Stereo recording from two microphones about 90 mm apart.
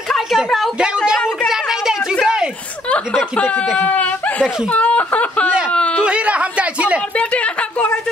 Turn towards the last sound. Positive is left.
turn(degrees=15)  # may be behind; listen again after turning